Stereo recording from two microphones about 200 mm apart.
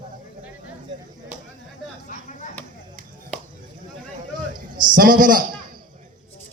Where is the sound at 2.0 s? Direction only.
40° left (ahead or behind).